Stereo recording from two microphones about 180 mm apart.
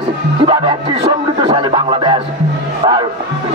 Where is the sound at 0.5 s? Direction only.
25° right (ahead or behind).